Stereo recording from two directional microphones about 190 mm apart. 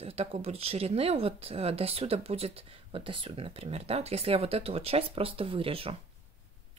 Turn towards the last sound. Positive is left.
turn(degrees=-30)  # may be behind; listen again after turning